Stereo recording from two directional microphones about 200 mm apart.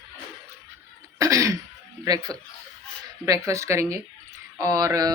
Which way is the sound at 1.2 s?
15° right (ahead or behind).